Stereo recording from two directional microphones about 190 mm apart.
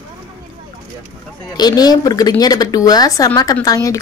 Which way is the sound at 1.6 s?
20° left (ahead or behind).